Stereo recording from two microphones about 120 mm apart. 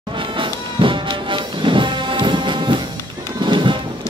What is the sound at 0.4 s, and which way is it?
Music, 45° right (ahead or behind).